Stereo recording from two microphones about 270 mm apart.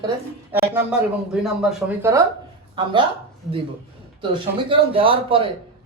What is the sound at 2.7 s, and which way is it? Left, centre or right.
Speech, centre.